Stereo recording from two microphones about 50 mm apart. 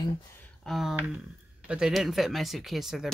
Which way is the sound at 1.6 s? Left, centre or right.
Centre.